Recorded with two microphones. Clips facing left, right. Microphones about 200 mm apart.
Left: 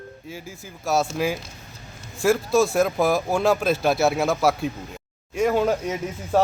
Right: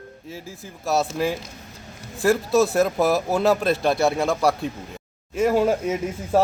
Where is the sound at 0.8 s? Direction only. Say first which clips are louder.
Even; centre (ahead or behind).